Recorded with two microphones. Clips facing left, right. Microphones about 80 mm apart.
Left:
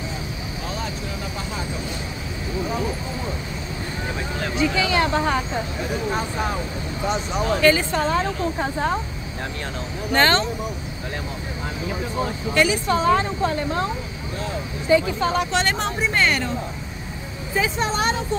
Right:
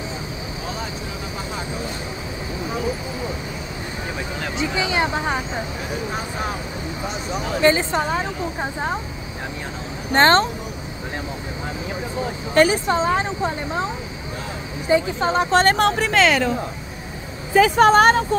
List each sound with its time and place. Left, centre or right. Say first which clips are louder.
4.6 s speech: left 1 dB; centre
7.6 s a woman's voice: right 2 dB; right
10.1 s speech: right 4 dB; right
12.5 s speech: right 4 dB; right
12.8 s speech: left 1 dB; right
14.9 s speech: even; right
15.5 s speech: right 6 dB; right
15.8 s speech: right 5 dB; right
17.6 s speech: right 10 dB; right